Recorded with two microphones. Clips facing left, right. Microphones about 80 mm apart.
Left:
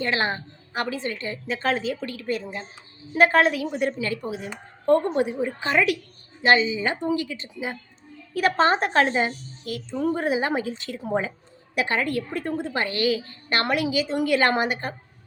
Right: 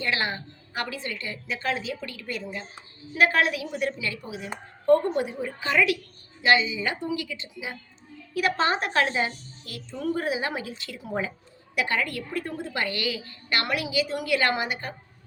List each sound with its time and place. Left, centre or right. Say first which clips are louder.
0.0 s a woman's voice: left 3 dB; left
4.9 s a woman's voice: left 1 dB; left